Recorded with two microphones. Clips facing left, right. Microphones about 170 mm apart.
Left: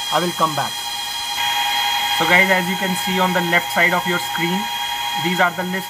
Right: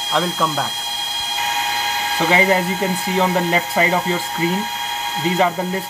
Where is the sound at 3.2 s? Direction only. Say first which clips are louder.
Right 1 dB; 15° right (ahead or behind).